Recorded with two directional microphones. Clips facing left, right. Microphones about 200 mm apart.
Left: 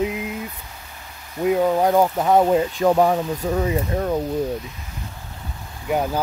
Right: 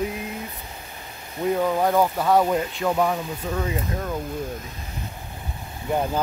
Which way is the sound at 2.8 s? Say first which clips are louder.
Left 6 dB; 40° left (ahead or behind).